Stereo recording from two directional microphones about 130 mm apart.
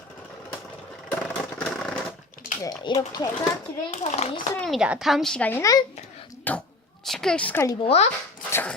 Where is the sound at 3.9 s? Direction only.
60° left (ahead or behind).